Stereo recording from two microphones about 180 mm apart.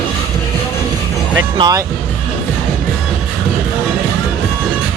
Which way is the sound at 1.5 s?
25° right (ahead or behind).